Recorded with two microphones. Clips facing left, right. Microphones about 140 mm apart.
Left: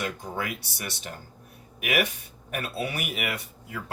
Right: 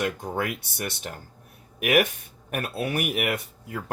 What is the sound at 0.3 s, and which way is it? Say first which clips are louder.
Speech: right 4 dB; 55° right (ahead or behind).